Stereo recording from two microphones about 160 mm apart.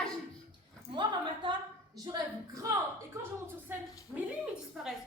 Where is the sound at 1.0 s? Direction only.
25° right (ahead or behind).